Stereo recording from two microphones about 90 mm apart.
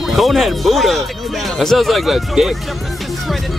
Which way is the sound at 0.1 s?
Centre (ahead or behind).